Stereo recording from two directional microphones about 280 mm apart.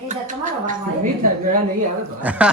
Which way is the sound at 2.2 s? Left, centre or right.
Centre.